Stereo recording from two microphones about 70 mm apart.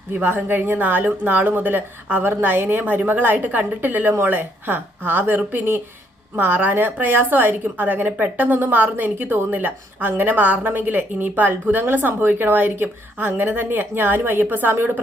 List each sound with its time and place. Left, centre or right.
0.1 s a woman's voice: right